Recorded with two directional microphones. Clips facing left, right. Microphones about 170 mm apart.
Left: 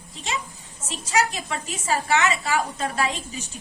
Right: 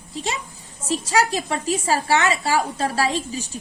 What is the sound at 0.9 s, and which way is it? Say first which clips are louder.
A woman's voice: right 4 dB; 35° right (ahead or behind).